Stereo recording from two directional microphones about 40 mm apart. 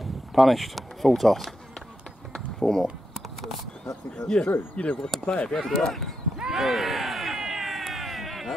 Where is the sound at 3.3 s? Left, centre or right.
Centre.